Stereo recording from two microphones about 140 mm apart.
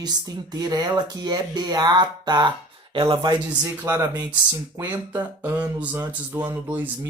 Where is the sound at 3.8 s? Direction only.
20° right (ahead or behind).